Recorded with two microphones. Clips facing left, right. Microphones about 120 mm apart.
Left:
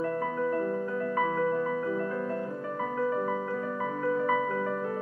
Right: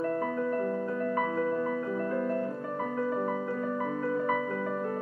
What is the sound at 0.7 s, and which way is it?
Music, 40° right (ahead or behind).